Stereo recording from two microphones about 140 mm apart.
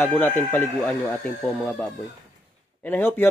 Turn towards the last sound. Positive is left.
turn(degrees=15)  # may be behind; listen again after turning